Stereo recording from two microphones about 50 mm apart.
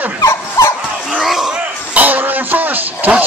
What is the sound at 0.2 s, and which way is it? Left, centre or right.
Dog, left.